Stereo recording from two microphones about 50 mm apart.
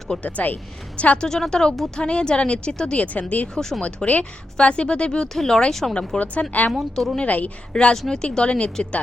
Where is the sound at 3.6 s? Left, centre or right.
Centre.